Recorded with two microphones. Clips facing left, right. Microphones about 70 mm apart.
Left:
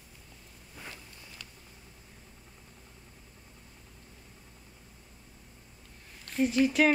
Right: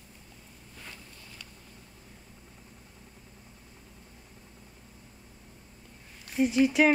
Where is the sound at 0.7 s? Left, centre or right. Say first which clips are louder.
Left 2 dB; centre.